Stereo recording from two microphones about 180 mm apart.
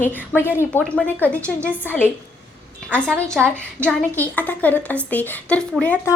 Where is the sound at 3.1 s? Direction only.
10° right (ahead or behind).